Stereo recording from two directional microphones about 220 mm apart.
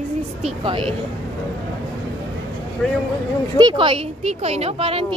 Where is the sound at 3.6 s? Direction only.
20° right (ahead or behind).